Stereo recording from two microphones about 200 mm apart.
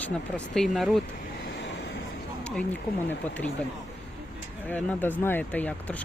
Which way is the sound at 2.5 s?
5° left (ahead or behind).